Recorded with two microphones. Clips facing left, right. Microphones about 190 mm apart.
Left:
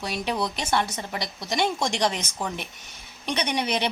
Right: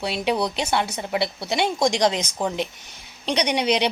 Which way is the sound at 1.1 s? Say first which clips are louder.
Right 8 dB; 60° right (ahead or behind).